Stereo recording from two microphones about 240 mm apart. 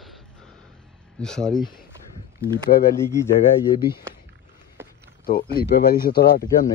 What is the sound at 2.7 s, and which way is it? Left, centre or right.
Speech, left.